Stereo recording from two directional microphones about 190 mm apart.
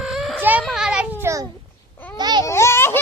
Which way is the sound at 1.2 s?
15° right (ahead or behind).